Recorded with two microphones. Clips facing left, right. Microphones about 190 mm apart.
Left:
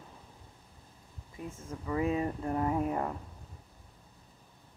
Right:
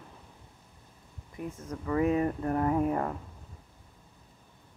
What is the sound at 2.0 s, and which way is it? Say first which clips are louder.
Speech: right 4 dB; 25° left (ahead or behind).